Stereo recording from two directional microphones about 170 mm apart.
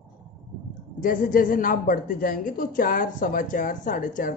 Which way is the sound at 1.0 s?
55° left (ahead or behind).